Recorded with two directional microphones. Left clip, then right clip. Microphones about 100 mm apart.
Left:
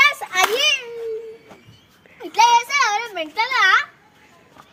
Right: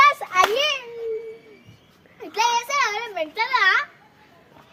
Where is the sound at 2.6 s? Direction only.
45° right (ahead or behind).